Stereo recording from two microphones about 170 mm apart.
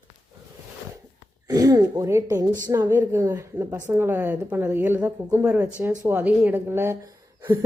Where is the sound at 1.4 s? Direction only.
20° right (ahead or behind).